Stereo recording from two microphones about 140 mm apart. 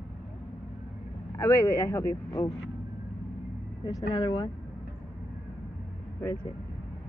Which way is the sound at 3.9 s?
30° left (ahead or behind).